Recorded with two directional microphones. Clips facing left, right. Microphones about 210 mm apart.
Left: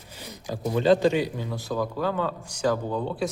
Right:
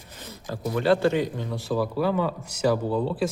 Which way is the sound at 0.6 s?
20° left (ahead or behind).